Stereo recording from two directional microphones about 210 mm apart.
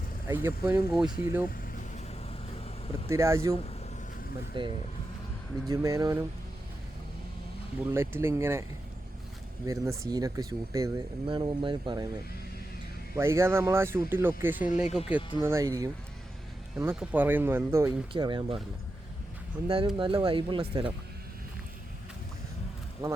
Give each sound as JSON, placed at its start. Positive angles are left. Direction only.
{"t": 0.3, "sound": "speech", "side_deg": -10}
{"t": 3.1, "sound": "speech", "side_deg": -15}
{"t": 4.5, "sound": "speech", "side_deg": -25}
{"t": 7.9, "sound": "speech", "side_deg": -10}
{"t": 9.6, "sound": "speech", "side_deg": -15}
{"t": 13.1, "sound": "speech", "side_deg": -10}
{"t": 16.7, "sound": "speech", "side_deg": -5}
{"t": 18.1, "sound": "speech", "side_deg": -20}
{"t": 19.6, "sound": "speech", "side_deg": -25}
{"t": 23.0, "sound": "speech", "side_deg": -20}